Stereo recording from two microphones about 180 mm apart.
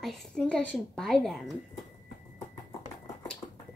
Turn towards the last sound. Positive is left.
turn(degrees=35)  # may be behind; listen again after turning